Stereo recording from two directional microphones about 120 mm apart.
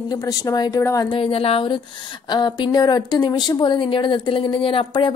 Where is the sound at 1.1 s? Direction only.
50° left (ahead or behind).